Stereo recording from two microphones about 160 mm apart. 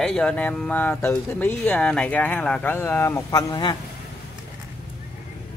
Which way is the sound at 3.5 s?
25° left (ahead or behind).